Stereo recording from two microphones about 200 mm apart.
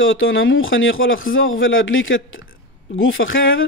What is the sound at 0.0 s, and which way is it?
A man's voice, 75° left (ahead or behind).